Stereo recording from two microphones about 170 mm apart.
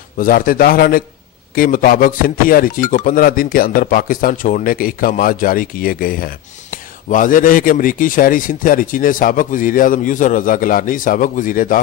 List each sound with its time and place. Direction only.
0.2 s speech: 55° left (ahead or behind)